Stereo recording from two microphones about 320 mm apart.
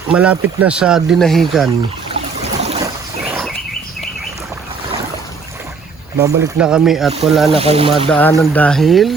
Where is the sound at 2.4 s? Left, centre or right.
Centre.